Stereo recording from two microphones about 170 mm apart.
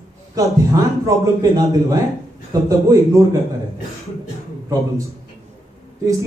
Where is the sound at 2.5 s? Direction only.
20° right (ahead or behind).